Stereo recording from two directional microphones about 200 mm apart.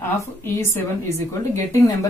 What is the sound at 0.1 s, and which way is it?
Speech, 10° left (ahead or behind).